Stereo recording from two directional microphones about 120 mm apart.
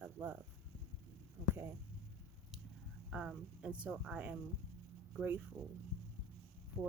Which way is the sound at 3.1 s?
5° right (ahead or behind).